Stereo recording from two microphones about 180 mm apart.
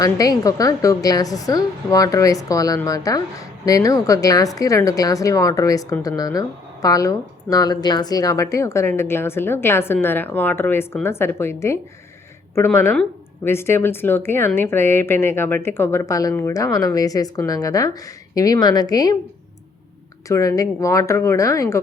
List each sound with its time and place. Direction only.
0.0 s a woman's voice: 20° left (ahead or behind)
20.2 s speech: 15° left (ahead or behind)